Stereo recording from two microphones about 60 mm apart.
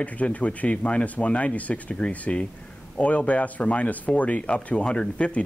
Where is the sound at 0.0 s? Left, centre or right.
Left.